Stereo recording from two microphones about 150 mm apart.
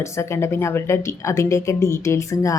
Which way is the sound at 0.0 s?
20° left (ahead or behind).